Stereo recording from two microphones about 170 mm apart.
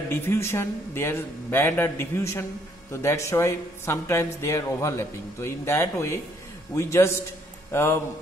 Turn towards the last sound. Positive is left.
turn(degrees=15)  # may be behind; listen again after turning